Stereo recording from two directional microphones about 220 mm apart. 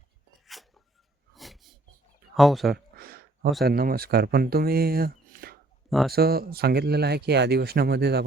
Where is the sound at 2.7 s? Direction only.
45° right (ahead or behind).